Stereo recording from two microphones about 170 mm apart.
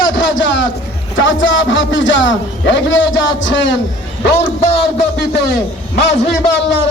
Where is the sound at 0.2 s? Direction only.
90° left.